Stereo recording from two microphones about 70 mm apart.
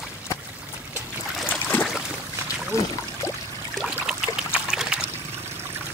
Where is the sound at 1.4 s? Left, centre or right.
Left.